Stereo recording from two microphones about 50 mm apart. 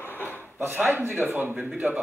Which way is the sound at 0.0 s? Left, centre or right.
Left.